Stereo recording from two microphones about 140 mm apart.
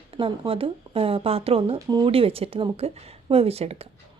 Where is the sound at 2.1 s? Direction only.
40° right (ahead or behind).